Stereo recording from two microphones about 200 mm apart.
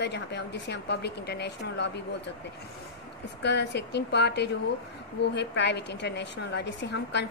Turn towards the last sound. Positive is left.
turn(degrees=60)  # may be behind; listen again after turning